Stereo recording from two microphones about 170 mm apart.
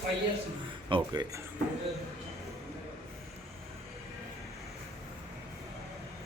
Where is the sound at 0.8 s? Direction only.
25° right (ahead or behind).